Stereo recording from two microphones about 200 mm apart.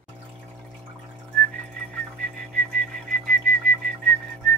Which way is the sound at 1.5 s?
5° left (ahead or behind).